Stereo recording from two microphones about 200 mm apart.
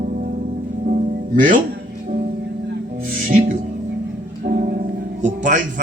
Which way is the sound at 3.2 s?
40° right (ahead or behind).